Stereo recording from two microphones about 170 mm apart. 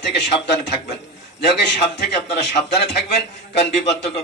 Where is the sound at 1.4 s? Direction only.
80° left.